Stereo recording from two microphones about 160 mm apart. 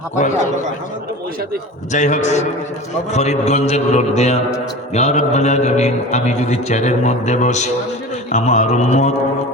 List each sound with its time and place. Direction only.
1.9 s a man's voice: 50° left (ahead or behind)